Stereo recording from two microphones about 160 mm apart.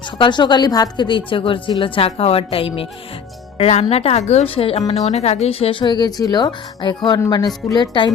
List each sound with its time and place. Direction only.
0.2 s a woman's voice: 30° left (ahead or behind)